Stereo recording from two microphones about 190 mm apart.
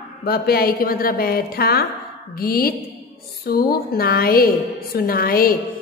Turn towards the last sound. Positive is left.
turn(degrees=50)  # may be behind; listen again after turning